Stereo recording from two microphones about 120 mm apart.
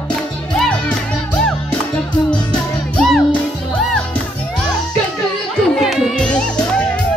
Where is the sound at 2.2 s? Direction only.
5° left (ahead or behind).